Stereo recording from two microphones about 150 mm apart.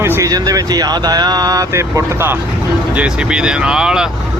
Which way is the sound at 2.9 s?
5° right (ahead or behind).